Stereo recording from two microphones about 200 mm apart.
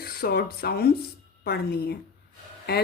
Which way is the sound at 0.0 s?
50° left (ahead or behind).